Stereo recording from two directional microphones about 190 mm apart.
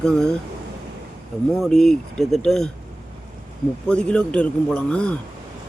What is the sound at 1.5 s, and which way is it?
A man's voice, 5° left (ahead or behind).